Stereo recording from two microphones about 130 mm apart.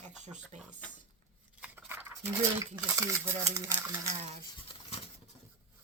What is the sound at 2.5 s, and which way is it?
Speech, 20° right (ahead or behind).